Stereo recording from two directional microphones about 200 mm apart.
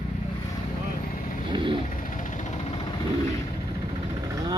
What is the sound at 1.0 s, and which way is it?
Vehicle, 45° left (ahead or behind).